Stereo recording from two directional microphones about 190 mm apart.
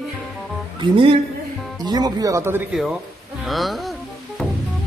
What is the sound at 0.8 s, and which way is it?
Speech, 30° right (ahead or behind).